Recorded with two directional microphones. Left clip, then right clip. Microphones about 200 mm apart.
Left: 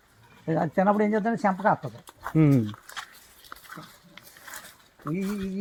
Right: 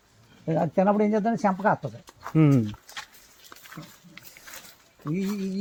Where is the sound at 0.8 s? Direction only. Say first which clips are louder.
Even; 25° right (ahead or behind).